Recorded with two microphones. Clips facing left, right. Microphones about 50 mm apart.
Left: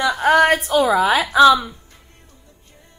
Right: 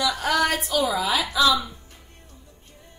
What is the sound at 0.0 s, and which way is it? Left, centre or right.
A woman's voice, left.